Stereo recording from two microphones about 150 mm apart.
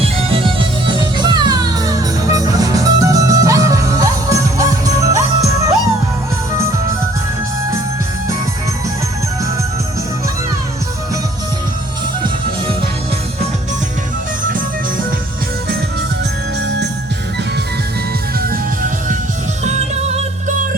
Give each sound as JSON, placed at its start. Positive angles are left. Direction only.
{"t": 0.0, "sound": "music", "side_deg": -35}
{"t": 18.3, "sound": "music", "side_deg": -75}
{"t": 19.6, "sound": "music", "side_deg": -50}